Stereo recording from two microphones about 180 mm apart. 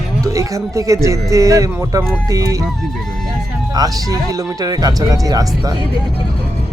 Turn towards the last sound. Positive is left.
turn(degrees=-20)  # may be behind; listen again after turning